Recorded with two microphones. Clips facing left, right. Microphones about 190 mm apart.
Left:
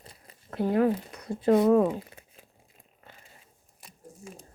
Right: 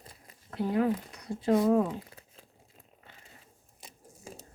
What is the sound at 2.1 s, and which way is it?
Crumpling, 20° left (ahead or behind).